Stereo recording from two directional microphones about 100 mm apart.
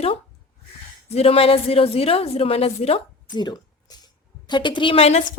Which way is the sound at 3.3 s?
45° left (ahead or behind).